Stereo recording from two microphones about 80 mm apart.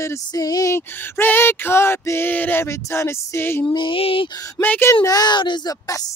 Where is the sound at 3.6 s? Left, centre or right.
Left.